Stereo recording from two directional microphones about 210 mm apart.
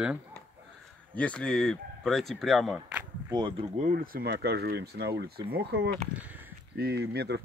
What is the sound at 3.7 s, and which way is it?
Speech, 40° right (ahead or behind).